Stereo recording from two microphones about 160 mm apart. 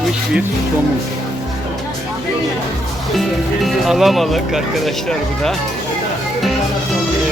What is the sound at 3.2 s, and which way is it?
Speech, centre (ahead or behind).